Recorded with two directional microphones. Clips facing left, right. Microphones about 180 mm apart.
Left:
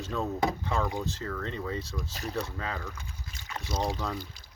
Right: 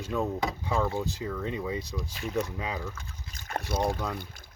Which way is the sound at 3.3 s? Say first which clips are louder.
Right 3 dB; 55° right (ahead or behind).